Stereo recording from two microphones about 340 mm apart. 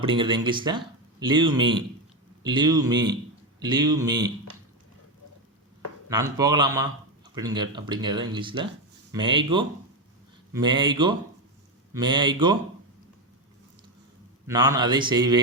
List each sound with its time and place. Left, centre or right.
0.0 s speech: centre
6.1 s speech: centre
14.4 s speech: centre